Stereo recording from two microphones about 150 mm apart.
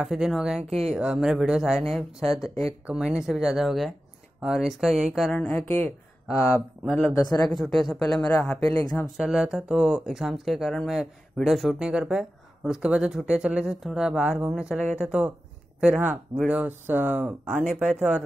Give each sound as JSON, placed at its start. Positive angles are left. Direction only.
{"t": 0.0, "sound": "speech", "side_deg": -5}
{"t": 0.7, "sound": "speech", "side_deg": -45}
{"t": 0.9, "sound": "speech", "side_deg": -5}
{"t": 7.2, "sound": "speech", "side_deg": 25}
{"t": 7.5, "sound": "speech", "side_deg": 0}
{"t": 8.7, "sound": "speech", "side_deg": 20}
{"t": 9.1, "sound": "speech", "side_deg": -5}